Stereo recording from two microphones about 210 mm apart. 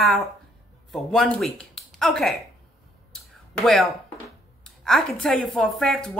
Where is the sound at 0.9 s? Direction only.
Centre (ahead or behind).